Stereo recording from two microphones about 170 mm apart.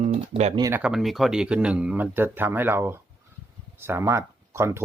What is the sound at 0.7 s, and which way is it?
Speech, 5° right (ahead or behind).